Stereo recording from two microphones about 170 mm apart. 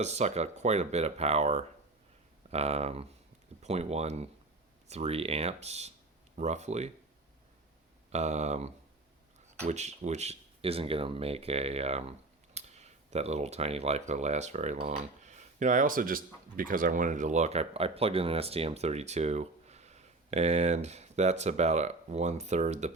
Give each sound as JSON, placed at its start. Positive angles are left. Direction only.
{"t": 0.0, "sound": "speech", "side_deg": -40}
{"t": 8.1, "sound": "speech", "side_deg": -40}
{"t": 12.5, "sound": "cutlery", "side_deg": -40}
{"t": 14.1, "sound": "speech", "side_deg": -40}